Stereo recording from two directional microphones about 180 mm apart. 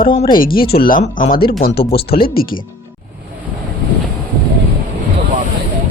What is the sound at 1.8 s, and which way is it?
Speech, 35° left (ahead or behind).